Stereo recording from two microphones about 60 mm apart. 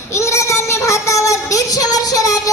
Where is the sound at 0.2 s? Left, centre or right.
Left.